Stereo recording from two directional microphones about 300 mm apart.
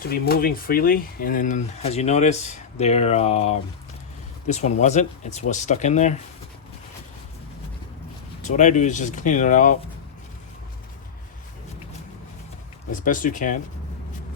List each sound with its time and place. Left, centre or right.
0.0 s speech: left
8.4 s speech: left
12.9 s speech: left